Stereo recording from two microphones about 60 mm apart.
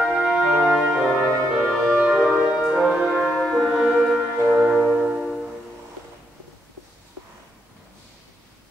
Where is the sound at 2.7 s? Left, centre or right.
Centre.